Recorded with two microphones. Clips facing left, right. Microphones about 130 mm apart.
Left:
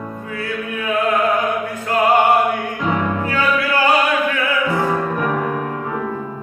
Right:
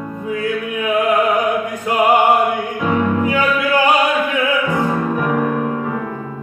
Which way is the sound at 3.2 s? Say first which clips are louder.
Right 2 dB; 15° right (ahead or behind).